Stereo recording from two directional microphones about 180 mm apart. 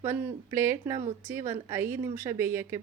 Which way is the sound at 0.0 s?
15° right (ahead or behind).